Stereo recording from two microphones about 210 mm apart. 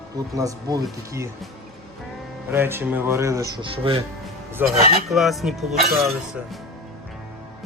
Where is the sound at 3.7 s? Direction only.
25° right (ahead or behind).